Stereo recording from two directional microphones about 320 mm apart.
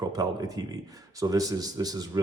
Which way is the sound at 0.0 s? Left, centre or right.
Centre.